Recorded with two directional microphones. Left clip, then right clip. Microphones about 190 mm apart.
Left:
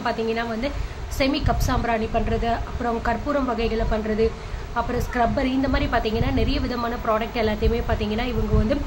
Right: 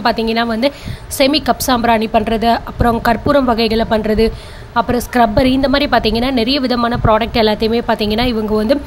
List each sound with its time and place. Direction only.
0.0 s a woman's voice: 50° right (ahead or behind)